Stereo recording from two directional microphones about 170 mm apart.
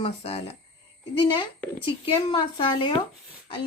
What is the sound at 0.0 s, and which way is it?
A woman's voice, 35° left (ahead or behind).